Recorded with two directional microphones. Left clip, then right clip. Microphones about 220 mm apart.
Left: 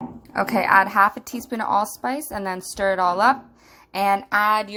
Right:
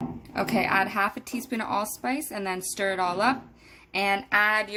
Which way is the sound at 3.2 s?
Centre (ahead or behind).